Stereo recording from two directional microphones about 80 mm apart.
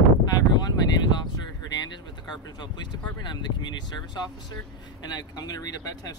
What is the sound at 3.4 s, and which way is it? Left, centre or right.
Speech, left.